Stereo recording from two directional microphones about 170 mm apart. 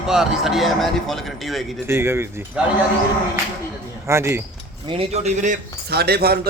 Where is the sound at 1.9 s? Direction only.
15° right (ahead or behind).